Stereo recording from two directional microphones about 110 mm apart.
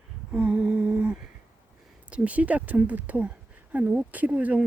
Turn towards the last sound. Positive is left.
turn(degrees=-10)  # may be behind; listen again after turning